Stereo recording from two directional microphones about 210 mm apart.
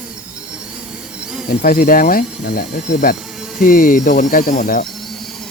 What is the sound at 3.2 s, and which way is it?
Insect, centre (ahead or behind).